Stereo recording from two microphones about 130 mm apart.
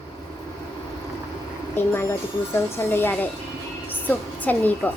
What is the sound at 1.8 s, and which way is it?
A woman's voice, 15° left (ahead or behind).